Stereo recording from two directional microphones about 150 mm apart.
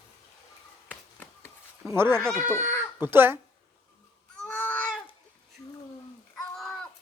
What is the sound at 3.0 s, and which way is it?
Speech, 15° right (ahead or behind).